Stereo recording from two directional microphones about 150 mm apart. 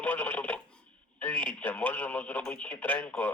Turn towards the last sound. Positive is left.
turn(degrees=10)  # may be behind; listen again after turning